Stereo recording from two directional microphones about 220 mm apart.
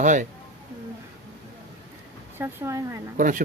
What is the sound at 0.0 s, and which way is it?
Speech, 35° right (ahead or behind).